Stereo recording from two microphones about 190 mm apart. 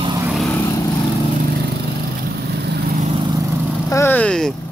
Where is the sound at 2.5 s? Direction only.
60° right (ahead or behind).